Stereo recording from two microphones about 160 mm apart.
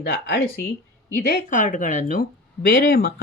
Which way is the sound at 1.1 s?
65° left (ahead or behind).